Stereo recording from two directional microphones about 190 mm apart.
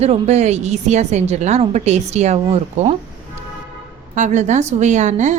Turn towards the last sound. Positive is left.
turn(degrees=-40)  # may be behind; listen again after turning